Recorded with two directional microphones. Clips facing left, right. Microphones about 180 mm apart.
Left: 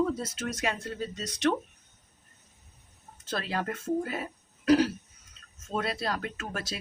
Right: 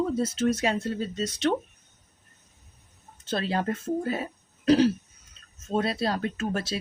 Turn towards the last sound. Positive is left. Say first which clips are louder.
# right 7 dB
turn(degrees=-30)  # may be behind; listen again after turning